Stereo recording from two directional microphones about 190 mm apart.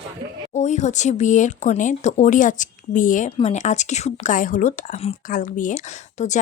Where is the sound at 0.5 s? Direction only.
40° left (ahead or behind).